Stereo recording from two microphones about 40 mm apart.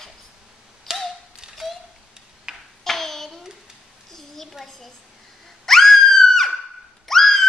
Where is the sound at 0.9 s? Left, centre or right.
Centre.